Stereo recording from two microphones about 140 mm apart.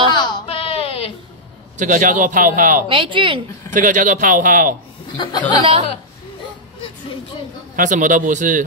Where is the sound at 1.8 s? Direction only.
70° right (ahead or behind).